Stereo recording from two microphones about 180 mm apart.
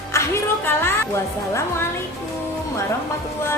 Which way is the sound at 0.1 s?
15° left (ahead or behind).